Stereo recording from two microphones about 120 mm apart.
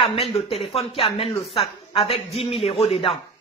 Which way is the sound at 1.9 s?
55° left (ahead or behind).